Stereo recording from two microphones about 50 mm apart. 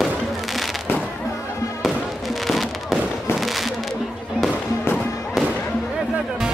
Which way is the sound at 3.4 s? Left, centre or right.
Centre.